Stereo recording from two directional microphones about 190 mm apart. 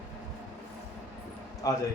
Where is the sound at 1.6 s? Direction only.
20° left (ahead or behind).